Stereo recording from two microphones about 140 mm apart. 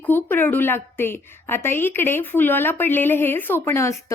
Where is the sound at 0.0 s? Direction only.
15° left (ahead or behind).